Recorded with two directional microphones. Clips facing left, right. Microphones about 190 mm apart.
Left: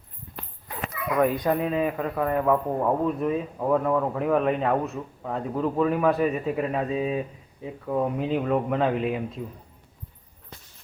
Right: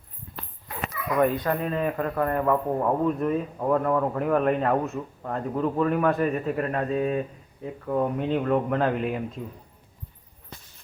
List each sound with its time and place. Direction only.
1.3 s a man's voice: 15° left (ahead or behind)